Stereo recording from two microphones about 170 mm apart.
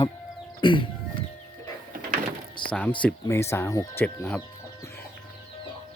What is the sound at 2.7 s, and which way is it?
Speech, 5° left (ahead or behind).